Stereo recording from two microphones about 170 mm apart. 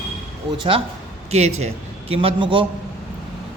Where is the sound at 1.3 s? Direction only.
40° right (ahead or behind).